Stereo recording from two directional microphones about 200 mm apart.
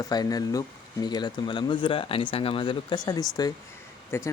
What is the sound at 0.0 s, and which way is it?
Speech, 20° left (ahead or behind).